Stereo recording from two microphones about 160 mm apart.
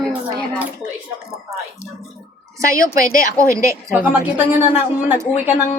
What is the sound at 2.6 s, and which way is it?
A woman's voice, 20° right (ahead or behind).